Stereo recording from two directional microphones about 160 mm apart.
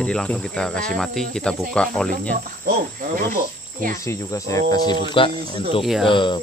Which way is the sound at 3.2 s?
60° right (ahead or behind).